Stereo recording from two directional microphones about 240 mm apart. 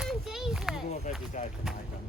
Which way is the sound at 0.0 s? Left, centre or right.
Centre.